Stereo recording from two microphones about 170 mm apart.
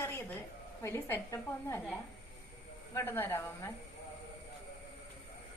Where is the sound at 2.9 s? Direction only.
15° left (ahead or behind).